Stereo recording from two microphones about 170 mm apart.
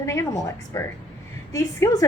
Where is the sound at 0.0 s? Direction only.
15° left (ahead or behind).